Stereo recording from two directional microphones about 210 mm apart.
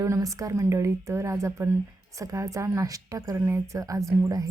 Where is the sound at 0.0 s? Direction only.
15° right (ahead or behind).